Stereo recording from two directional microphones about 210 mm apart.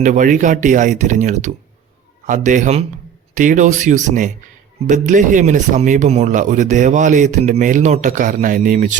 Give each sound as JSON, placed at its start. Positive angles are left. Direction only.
{"t": 0.0, "sound": "speech", "side_deg": -35}